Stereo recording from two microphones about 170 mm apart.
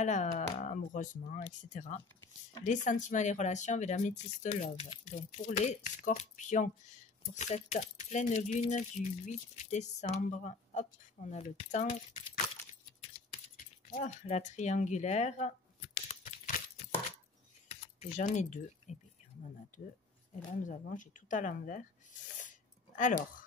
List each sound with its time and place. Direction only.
0.0 s speech: 45° left (ahead or behind)
13.9 s speech: 40° left (ahead or behind)
16.1 s a sound: 45° left (ahead or behind)
17.6 s speech: 45° left (ahead or behind)
20.4 s speech: 50° left (ahead or behind)